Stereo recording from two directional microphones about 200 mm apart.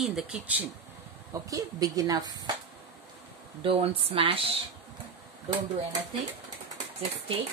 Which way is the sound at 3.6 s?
30° right (ahead or behind).